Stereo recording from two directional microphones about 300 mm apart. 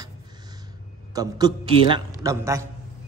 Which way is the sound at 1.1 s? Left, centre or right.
Centre.